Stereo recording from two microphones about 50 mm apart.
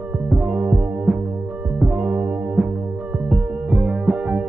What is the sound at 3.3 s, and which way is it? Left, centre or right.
Music, centre.